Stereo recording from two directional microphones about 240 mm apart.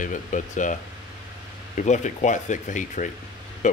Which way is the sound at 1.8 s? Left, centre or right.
Left.